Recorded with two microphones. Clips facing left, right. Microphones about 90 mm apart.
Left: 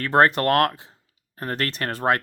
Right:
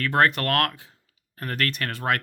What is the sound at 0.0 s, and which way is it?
Speech, 30° left (ahead or behind).